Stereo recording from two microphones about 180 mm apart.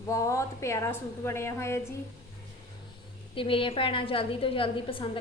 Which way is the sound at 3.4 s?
30° left (ahead or behind).